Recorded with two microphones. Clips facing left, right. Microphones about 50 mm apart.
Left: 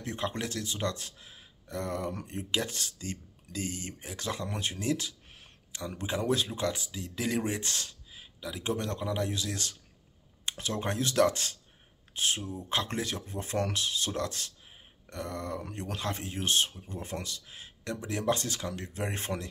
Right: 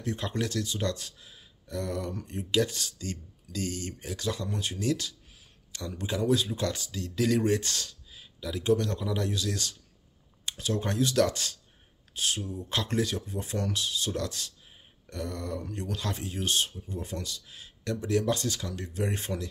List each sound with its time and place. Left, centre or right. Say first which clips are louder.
0.0 s speech: right 2 dB; left
6.6 s speech: right 1 dB; left
7.6 s speech: right 1 dB; left